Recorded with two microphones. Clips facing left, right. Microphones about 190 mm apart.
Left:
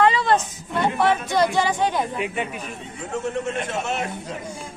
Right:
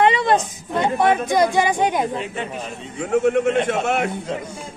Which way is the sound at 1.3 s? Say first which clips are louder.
Right 3 dB; 15° right (ahead or behind).